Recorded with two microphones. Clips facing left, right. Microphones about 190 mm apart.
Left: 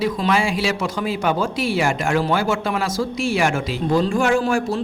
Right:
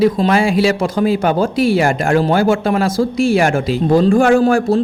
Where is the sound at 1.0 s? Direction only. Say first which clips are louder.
Right 7 dB; 50° right (ahead or behind).